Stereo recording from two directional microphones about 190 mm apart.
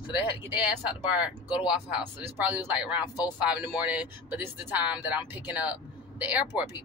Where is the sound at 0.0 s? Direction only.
5° right (ahead or behind).